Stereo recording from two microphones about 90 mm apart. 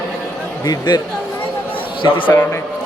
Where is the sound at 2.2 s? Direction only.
20° left (ahead or behind).